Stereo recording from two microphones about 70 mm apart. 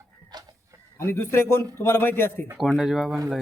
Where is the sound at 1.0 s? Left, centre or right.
Left.